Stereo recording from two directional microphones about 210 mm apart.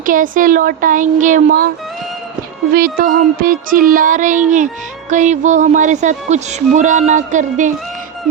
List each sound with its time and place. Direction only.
0.0 s child singing: 40° right (ahead or behind)
2.7 s child singing: 40° right (ahead or behind)